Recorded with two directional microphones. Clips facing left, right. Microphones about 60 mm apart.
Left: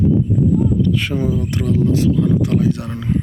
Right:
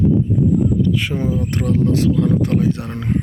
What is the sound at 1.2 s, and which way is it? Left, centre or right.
Speech, right.